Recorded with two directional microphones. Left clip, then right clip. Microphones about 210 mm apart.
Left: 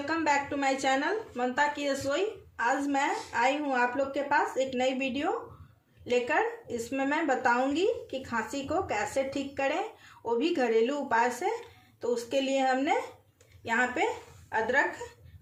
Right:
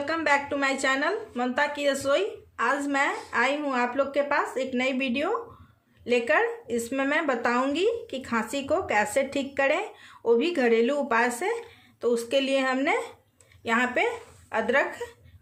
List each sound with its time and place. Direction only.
0.0 s a woman's voice: 35° right (ahead or behind)